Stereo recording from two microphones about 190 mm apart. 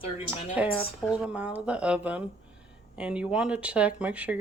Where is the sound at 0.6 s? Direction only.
5° right (ahead or behind).